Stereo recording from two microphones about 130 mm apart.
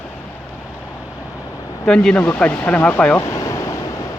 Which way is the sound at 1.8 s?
5° left (ahead or behind).